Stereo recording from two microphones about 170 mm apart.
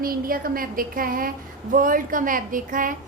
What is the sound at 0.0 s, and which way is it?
A woman's voice, 60° right (ahead or behind).